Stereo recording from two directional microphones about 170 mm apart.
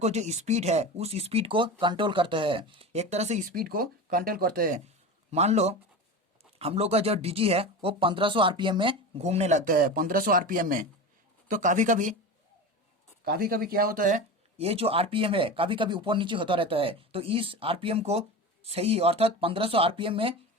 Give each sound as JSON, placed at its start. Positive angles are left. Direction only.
{"t": 0.0, "sound": "speech", "side_deg": -40}
{"t": 5.3, "sound": "a man's voice", "side_deg": -40}
{"t": 13.2, "sound": "speech", "side_deg": -65}
{"t": 14.6, "sound": "speech", "side_deg": -35}